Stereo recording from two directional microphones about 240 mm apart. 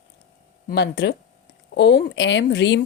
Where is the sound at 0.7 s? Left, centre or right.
Left.